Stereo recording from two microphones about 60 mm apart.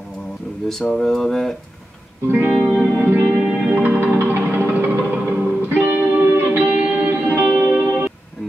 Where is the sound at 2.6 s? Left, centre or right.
Centre.